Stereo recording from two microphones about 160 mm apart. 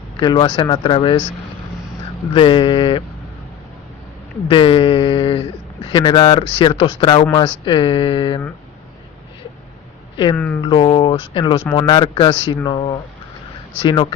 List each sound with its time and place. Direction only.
0.2 s speech: 30° left (ahead or behind)
2.3 s speech: 30° left (ahead or behind)
4.4 s speech: 30° left (ahead or behind)
10.3 s speech: 5° left (ahead or behind)
10.6 s speech: 30° left (ahead or behind)